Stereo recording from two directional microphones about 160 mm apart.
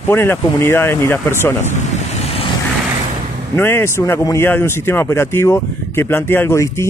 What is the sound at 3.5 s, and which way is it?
A man's voice, 15° left (ahead or behind).